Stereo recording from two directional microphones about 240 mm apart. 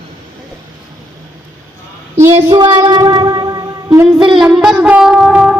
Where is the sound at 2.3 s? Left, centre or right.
Centre.